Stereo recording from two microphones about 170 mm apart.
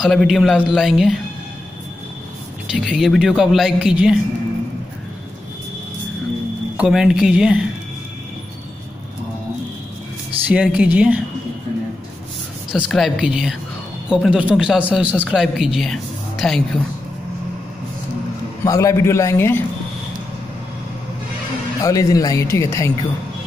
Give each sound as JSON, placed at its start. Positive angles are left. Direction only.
{"t": 0.0, "sound": "a man's voice", "side_deg": 0}
{"t": 2.7, "sound": "a man's voice", "side_deg": -5}
{"t": 6.8, "sound": "a man's voice", "side_deg": -5}
{"t": 10.5, "sound": "speech", "side_deg": -5}
{"t": 12.8, "sound": "a man's voice", "side_deg": 0}
{"t": 18.6, "sound": "a man's voice", "side_deg": 20}
{"t": 21.8, "sound": "speech", "side_deg": 20}